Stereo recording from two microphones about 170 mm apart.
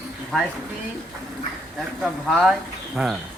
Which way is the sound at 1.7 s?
Centre (ahead or behind).